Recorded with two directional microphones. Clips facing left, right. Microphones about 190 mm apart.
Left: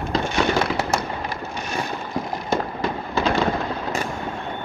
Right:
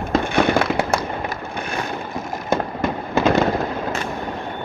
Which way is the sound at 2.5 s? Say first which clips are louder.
Right 3 dB; 50° right (ahead or behind).